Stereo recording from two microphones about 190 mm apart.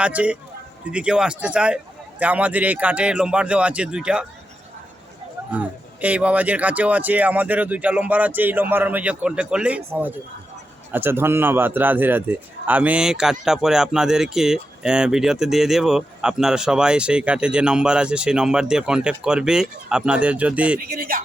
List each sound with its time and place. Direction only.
0.0 s a man's voice: 5° right (ahead or behind)
5.5 s a man's voice: 5° right (ahead or behind)
20.7 s speech: 50° right (ahead or behind)